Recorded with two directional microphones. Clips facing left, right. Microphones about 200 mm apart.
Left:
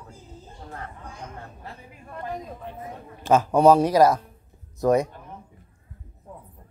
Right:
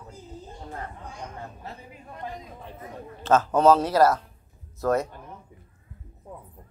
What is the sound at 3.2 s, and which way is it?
A man's voice, 15° left (ahead or behind).